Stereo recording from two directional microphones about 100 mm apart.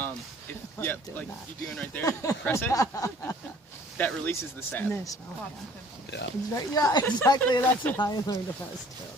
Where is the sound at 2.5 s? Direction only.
30° left (ahead or behind).